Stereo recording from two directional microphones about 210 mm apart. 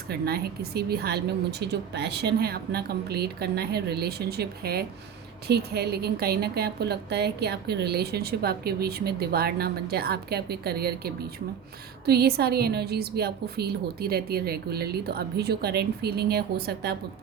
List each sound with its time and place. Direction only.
0.1 s a woman's voice: 50° right (ahead or behind)